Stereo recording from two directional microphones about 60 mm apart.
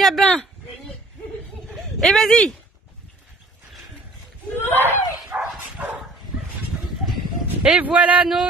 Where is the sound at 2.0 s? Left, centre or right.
Centre.